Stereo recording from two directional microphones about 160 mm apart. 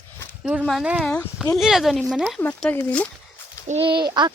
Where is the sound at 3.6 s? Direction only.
40° right (ahead or behind).